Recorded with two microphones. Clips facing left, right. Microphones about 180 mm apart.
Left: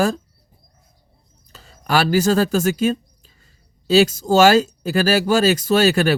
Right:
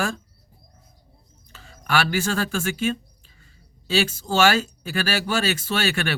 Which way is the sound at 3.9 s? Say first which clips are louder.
Left 8 dB; 40° left (ahead or behind).